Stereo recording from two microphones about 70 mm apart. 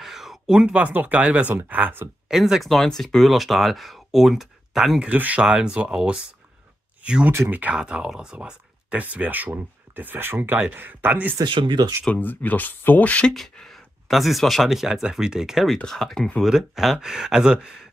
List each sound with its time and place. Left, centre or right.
0.0 s speech: centre
1.5 s speech: right
2.2 s speech: centre
5.1 s speech: right
7.0 s a sound: centre
7.7 s speech: centre
11.3 s speech: right
12.2 s speech: left
13.3 s speech: centre
15.7 s speech: centre
16.4 s speech: centre